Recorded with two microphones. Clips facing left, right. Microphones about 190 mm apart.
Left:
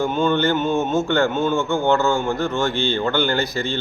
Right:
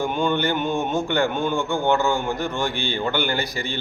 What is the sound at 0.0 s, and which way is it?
Speech, 15° right (ahead or behind).